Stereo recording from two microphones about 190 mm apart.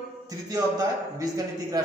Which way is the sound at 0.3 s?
15° right (ahead or behind).